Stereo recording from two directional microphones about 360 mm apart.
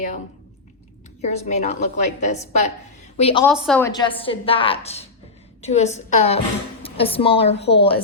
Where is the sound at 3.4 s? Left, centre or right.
Centre.